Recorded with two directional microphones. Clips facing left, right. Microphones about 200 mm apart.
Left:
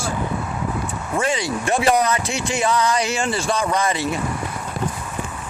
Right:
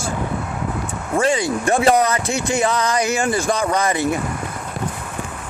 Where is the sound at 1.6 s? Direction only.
45° right (ahead or behind).